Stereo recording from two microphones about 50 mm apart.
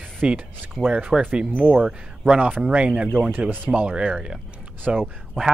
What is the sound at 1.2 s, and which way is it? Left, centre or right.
Speech, right.